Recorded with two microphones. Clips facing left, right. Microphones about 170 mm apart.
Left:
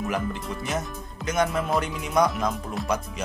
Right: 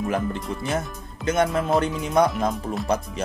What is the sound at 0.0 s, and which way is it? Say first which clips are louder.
Speech: right 3 dB; 30° right (ahead or behind).